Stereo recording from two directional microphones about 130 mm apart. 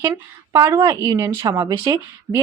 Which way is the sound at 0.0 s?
25° right (ahead or behind).